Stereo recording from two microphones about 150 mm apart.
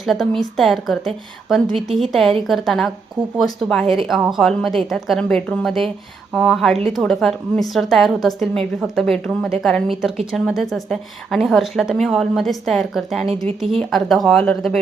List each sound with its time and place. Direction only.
0.0 s a woman's voice: centre (ahead or behind)